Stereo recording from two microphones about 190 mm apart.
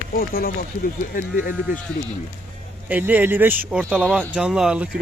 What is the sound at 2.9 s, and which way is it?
Speech, 10° right (ahead or behind).